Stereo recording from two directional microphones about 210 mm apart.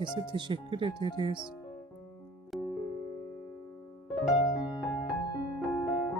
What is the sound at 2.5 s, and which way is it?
Music, centre (ahead or behind).